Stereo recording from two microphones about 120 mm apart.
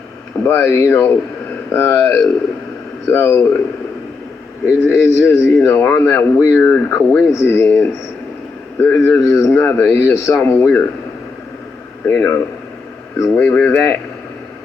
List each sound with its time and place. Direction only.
0.4 s a man's voice: 20° left (ahead or behind)
4.9 s a man's voice: 20° left (ahead or behind)
12.0 s a man's voice: 20° left (ahead or behind)